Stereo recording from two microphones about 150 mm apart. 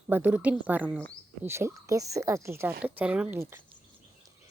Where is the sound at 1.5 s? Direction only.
15° right (ahead or behind).